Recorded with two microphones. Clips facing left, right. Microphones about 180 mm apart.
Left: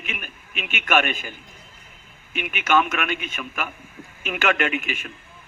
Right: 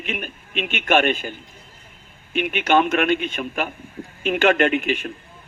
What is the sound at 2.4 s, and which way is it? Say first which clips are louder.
A man's voice: right 3 dB; 30° right (ahead or behind).